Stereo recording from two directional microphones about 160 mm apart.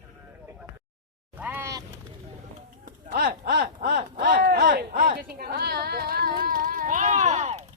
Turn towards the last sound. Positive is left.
turn(degrees=-45)  # may be behind; listen again after turning